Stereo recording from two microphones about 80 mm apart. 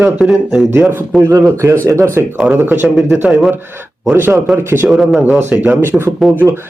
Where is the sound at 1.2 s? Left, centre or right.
Right.